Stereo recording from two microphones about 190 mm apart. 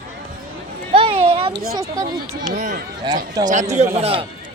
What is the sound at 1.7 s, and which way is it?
Speech, 15° right (ahead or behind).